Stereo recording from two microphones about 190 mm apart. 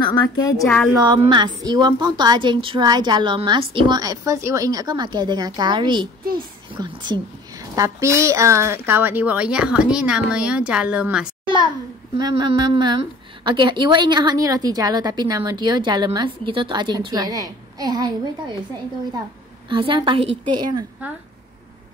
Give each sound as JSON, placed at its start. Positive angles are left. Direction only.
{"t": 0.0, "sound": "a woman's voice", "side_deg": 20}
{"t": 1.3, "sound": "a woman's voice", "side_deg": -20}
{"t": 12.2, "sound": "a woman's voice", "side_deg": -20}
{"t": 19.7, "sound": "a woman's voice", "side_deg": -25}